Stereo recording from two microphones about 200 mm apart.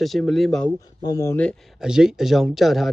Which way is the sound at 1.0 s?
15° left (ahead or behind).